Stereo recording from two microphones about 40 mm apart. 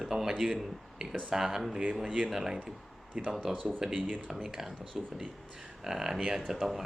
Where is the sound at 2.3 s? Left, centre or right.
Centre.